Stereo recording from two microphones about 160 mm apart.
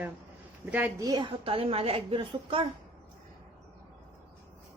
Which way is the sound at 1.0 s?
25° right (ahead or behind).